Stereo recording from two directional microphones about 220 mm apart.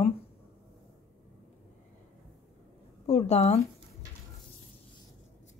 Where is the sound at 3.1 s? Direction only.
30° left (ahead or behind).